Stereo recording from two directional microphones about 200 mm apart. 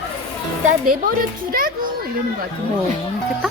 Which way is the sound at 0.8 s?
45° right (ahead or behind).